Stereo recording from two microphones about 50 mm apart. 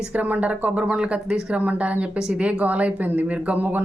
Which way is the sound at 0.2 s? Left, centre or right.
Right.